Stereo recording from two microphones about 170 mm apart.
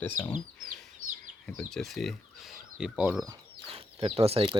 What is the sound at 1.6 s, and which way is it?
Speech, centre (ahead or behind).